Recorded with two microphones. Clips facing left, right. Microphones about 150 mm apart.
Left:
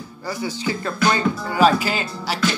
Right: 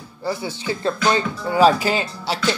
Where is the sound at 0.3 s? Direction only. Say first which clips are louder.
Even; 25° right (ahead or behind).